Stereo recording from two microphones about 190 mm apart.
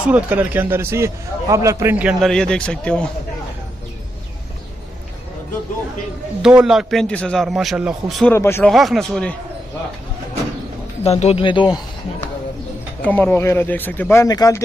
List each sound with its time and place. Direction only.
0.0 s a man's voice: 10° right (ahead or behind)
6.4 s a man's voice: 5° right (ahead or behind)
8.3 s speech: 10° left (ahead or behind)
8.7 s a man's voice: centre (ahead or behind)
11.1 s speech: 35° left (ahead or behind)
13.0 s speech: 10° left (ahead or behind)